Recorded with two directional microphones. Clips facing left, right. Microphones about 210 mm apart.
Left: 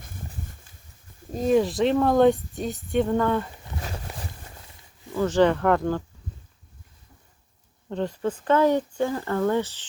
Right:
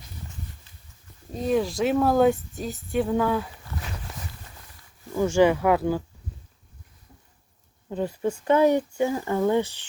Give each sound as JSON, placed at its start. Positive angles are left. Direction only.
{"t": 0.0, "sound": "a sound", "side_deg": 50}
{"t": 1.5, "sound": "speech", "side_deg": 0}
{"t": 5.1, "sound": "speech", "side_deg": -10}
{"t": 7.9, "sound": "speech", "side_deg": -10}